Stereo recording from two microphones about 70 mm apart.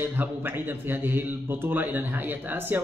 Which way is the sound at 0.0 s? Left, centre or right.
Right.